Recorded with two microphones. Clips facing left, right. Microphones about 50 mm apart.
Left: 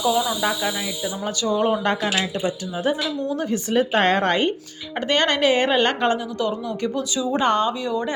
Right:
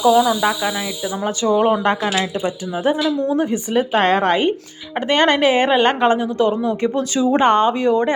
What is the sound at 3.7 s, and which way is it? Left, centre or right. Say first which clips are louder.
Speech: right 2 dB; centre.